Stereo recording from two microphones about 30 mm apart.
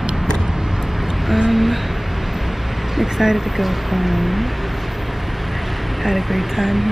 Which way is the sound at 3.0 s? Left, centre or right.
Centre.